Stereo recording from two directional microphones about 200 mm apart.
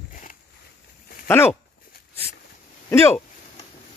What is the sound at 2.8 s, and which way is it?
Speech, 10° left (ahead or behind).